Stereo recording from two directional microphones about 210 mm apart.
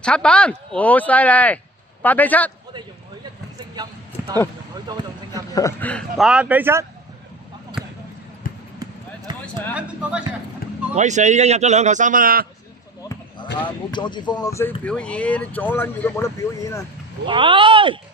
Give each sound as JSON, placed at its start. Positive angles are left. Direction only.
{"t": 0.0, "sound": "speech", "side_deg": 5}
{"t": 4.7, "sound": "speech", "side_deg": -20}
{"t": 5.5, "sound": "speech", "side_deg": 10}
{"t": 7.8, "sound": "basketball bounce", "side_deg": -5}
{"t": 8.4, "sound": "basketball bounce", "side_deg": 40}
{"t": 9.3, "sound": "a sound", "side_deg": -20}
{"t": 9.7, "sound": "speech", "side_deg": -5}
{"t": 10.9, "sound": "speech", "side_deg": -35}
{"t": 13.6, "sound": "speech", "side_deg": 20}
{"t": 17.2, "sound": "speech", "side_deg": -25}